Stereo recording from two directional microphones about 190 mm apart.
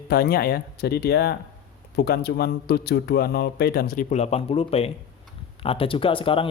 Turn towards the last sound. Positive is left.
turn(degrees=30)  # may be behind; listen again after turning